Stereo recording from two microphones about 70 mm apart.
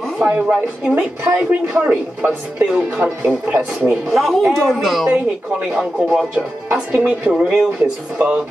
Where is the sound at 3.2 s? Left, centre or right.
Centre.